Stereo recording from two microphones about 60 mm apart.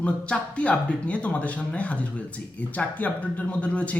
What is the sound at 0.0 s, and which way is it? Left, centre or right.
A man's voice, left.